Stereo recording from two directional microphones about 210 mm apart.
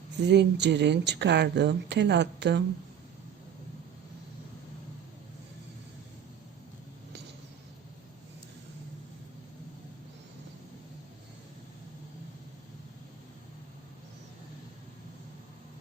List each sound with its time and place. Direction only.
0.2 s speech: 55° right (ahead or behind)